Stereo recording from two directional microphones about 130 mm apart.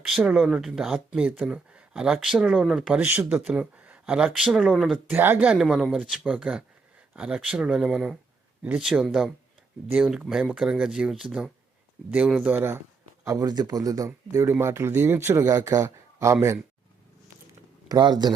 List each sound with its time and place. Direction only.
0.0 s speech: 5° right (ahead or behind)
5.1 s speech: 15° right (ahead or behind)
17.8 s speech: 30° right (ahead or behind)